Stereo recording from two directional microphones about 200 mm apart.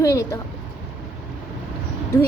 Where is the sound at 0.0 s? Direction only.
15° left (ahead or behind).